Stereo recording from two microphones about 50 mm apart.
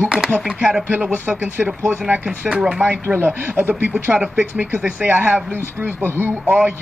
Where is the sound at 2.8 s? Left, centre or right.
Right.